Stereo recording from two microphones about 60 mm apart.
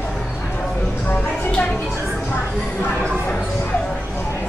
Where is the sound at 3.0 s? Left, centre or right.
Centre.